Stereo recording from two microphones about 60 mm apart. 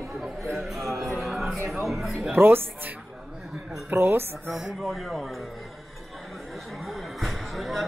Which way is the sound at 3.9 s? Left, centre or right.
Right.